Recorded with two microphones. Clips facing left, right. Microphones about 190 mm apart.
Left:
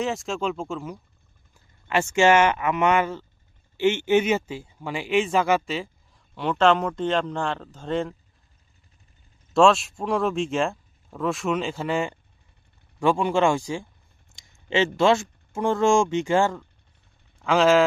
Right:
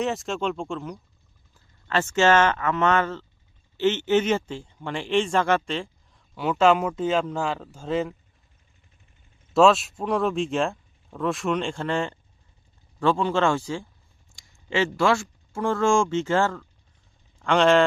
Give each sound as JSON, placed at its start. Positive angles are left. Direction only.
{"t": 0.0, "sound": "speech", "side_deg": 0}
{"t": 1.9, "sound": "speech", "side_deg": 15}
{"t": 6.3, "sound": "speech", "side_deg": -5}
{"t": 9.6, "sound": "speech", "side_deg": 0}
{"t": 14.3, "sound": "a sound", "side_deg": 20}
{"t": 14.9, "sound": "speech", "side_deg": 20}
{"t": 17.4, "sound": "speech", "side_deg": 5}